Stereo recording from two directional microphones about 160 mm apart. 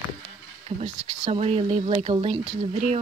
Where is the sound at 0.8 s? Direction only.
40° right (ahead or behind).